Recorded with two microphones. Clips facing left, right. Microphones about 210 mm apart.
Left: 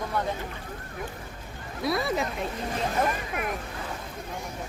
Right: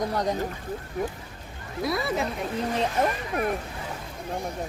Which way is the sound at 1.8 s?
Centre (ahead or behind).